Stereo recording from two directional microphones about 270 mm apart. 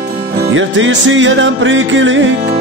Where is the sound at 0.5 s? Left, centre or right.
Right.